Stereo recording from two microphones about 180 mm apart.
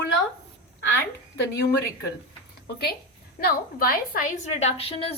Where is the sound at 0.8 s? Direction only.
70° left (ahead or behind).